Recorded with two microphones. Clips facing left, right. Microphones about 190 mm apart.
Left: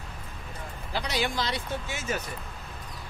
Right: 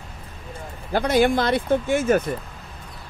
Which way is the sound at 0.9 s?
50° right (ahead or behind).